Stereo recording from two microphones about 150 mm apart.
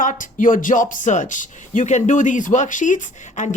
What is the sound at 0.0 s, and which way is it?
Speech, 60° left (ahead or behind).